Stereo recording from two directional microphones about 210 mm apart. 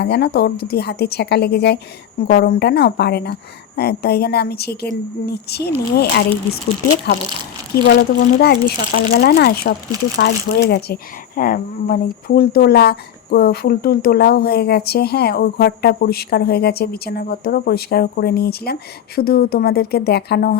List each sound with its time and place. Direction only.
0.0 s speech: 50° left (ahead or behind)
7.9 s speech: 50° left (ahead or behind)